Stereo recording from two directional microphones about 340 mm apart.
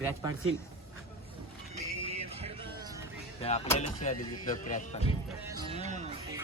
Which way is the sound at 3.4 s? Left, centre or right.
Centre.